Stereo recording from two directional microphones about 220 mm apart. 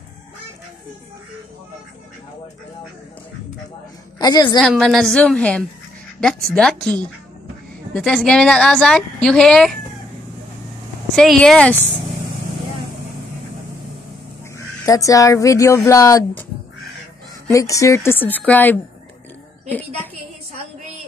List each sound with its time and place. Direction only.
4.2 s speech: 20° left (ahead or behind)
4.6 s a woman's voice: 5° left (ahead or behind)
11.1 s a woman's voice: centre (ahead or behind)
14.9 s speech: 15° left (ahead or behind)
17.5 s speech: 15° left (ahead or behind)